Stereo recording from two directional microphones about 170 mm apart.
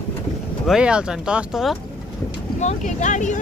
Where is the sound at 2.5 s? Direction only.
45° left (ahead or behind).